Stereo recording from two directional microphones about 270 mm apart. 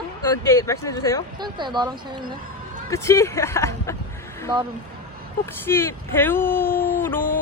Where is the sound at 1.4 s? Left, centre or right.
Centre.